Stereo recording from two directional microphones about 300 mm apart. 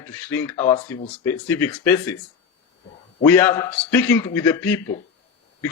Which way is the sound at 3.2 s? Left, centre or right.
Centre.